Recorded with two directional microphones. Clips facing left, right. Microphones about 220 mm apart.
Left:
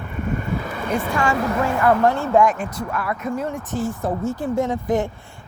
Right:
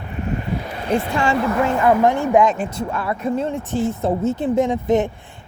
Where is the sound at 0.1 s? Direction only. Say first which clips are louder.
Right 1 dB; 50° left (ahead or behind).